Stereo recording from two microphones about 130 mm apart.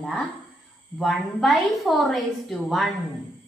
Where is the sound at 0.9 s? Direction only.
Centre (ahead or behind).